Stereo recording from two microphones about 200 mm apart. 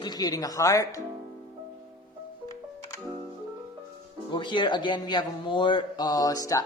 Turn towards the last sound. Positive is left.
turn(degrees=15)  # may be behind; listen again after turning